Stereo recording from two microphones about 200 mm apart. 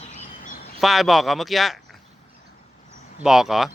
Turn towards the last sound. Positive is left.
turn(degrees=0)  # may be behind; listen again after turning